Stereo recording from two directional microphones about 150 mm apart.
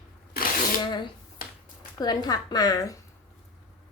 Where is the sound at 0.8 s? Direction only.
30° left (ahead or behind).